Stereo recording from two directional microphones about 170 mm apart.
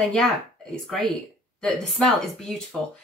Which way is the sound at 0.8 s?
5° left (ahead or behind).